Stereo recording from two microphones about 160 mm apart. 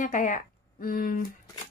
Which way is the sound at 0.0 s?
55° left (ahead or behind).